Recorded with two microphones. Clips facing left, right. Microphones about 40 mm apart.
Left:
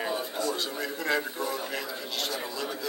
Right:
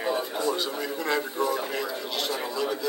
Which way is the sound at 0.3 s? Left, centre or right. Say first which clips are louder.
Right 3 dB; right.